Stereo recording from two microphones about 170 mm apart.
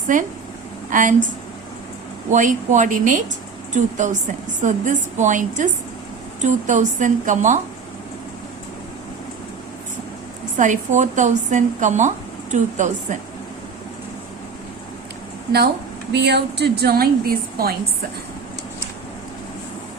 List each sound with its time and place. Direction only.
0.1 s speech: 50° right (ahead or behind)
2.3 s speech: 50° right (ahead or behind)
10.6 s speech: 45° right (ahead or behind)
16.1 s a woman's voice: 80° right; by 17.7 s 60° right (ahead or behind)